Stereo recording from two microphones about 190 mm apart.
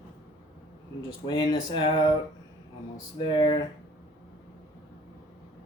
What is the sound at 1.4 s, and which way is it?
Speech, 25° left (ahead or behind).